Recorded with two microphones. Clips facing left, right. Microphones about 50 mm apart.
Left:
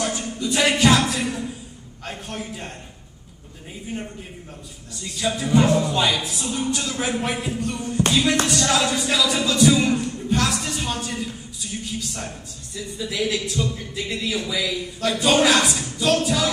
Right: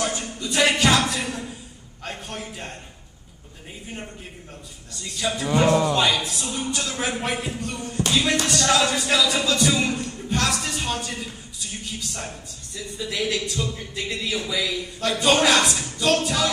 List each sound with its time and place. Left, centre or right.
0.4 s speech: centre
5.0 s speech: centre
5.7 s a man's voice: right
5.9 s speech: centre
12.7 s speech: centre